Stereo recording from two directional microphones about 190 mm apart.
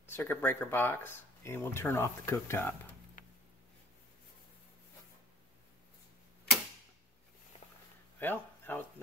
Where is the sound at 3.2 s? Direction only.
45° left (ahead or behind).